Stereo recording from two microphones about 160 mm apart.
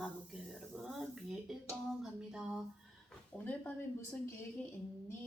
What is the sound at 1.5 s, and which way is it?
Speech, centre (ahead or behind).